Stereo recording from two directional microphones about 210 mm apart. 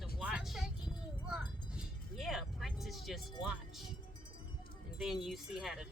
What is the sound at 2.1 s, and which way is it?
Vehicle, centre (ahead or behind).